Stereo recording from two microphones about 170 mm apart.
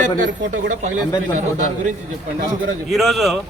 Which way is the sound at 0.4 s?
90° right.